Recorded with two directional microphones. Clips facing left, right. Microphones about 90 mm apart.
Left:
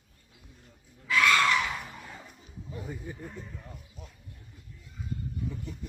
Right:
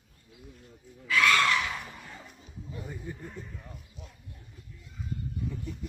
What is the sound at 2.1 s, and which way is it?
Music, centre (ahead or behind).